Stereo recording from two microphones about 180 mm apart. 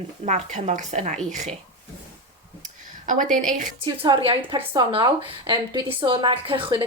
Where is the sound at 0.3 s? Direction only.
40° right (ahead or behind).